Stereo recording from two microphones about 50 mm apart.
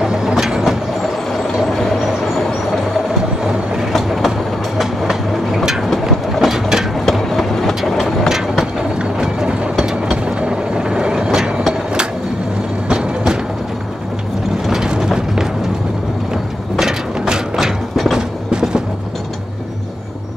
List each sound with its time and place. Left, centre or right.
0.0 s train: centre
3.9 s train: centre
7.1 s train: centre
8.3 s vehicle: centre
8.9 s mechanisms: centre
12.9 s music: centre
14.7 s vehicle: centre
16.7 s mechanisms: centre
18.1 s train: centre